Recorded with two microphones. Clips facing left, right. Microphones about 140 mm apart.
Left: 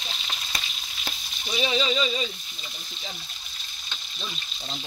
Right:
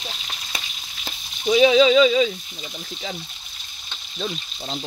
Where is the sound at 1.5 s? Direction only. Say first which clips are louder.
Right 12 dB; 90° right.